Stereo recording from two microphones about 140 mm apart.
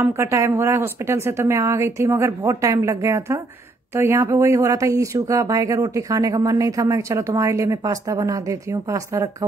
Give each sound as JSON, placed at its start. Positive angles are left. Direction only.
{"t": 0.0, "sound": "speech", "side_deg": -20}